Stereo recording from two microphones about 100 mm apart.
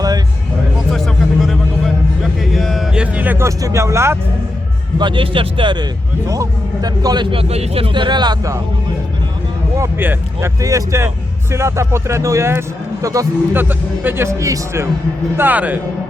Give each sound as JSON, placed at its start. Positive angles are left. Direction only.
{"t": 0.9, "sound": "music", "side_deg": 0}
{"t": 3.4, "sound": "speech", "side_deg": -30}
{"t": 4.9, "sound": "speech", "side_deg": -55}
{"t": 6.2, "sound": "a man's voice", "side_deg": -35}
{"t": 7.3, "sound": "speech", "side_deg": -80}
{"t": 7.9, "sound": "speech", "side_deg": -50}
{"t": 10.0, "sound": "speech", "side_deg": -20}
{"t": 10.6, "sound": "a man's voice", "side_deg": -35}
{"t": 13.5, "sound": "speech", "side_deg": -20}
{"t": 15.4, "sound": "speech", "side_deg": -15}